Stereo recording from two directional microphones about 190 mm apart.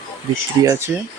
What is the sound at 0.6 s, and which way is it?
Speech, 15° right (ahead or behind).